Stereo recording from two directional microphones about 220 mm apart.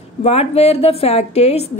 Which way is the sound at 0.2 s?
30° left (ahead or behind).